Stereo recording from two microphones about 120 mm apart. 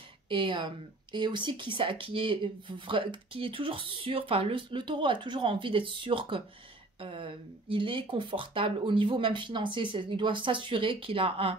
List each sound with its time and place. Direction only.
0.3 s speech: 45° right (ahead or behind)